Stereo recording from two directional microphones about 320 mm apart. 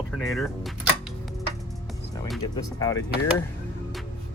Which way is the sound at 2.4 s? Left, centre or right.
Centre.